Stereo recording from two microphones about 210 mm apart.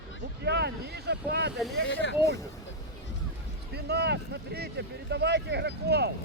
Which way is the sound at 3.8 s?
50° right (ahead or behind).